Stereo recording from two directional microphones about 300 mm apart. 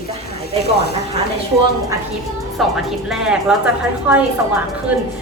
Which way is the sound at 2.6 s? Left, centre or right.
Centre.